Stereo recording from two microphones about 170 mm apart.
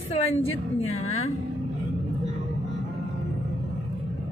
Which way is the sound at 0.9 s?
40° left (ahead or behind).